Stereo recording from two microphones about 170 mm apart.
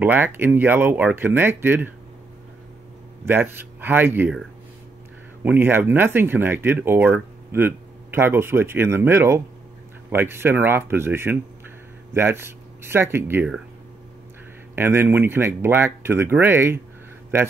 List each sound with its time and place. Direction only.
0.0 s speech: 10° right (ahead or behind)
3.3 s speech: 10° right (ahead or behind)
5.4 s speech: 10° right (ahead or behind)
14.8 s speech: 15° right (ahead or behind)